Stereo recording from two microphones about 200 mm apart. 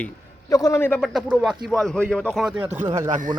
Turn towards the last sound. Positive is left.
turn(degrees=-40)  # may be behind; listen again after turning